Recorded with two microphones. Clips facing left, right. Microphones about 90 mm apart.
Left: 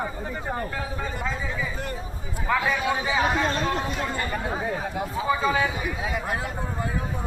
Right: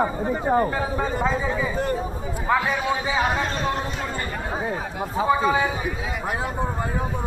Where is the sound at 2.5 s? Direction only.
15° right (ahead or behind).